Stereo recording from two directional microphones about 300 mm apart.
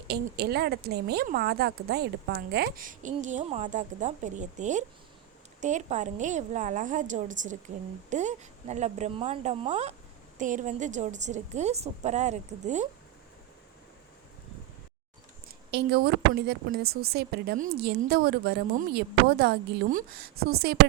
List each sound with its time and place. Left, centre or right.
0.1 s a woman's voice: right
15.4 s a woman's voice: right